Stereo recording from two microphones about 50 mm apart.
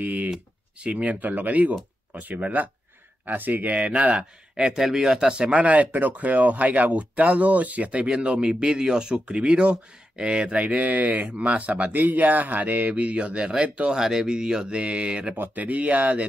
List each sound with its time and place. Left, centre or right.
0.0 s speech: right
4.6 s speech: centre
5.5 s speech: right
15.3 s speech: right